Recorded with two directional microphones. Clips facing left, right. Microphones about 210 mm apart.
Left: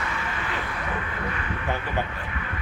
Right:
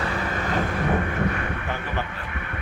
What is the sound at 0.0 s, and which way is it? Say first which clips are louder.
Vehicle: right 5 dB; 35° right (ahead or behind).